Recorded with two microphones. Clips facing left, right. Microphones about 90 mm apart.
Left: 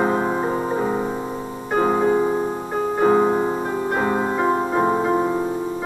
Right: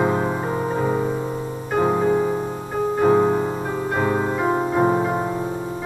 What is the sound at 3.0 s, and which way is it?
Music, 10° left (ahead or behind).